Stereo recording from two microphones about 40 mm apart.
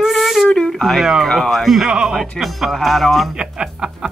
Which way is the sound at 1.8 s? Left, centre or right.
Right.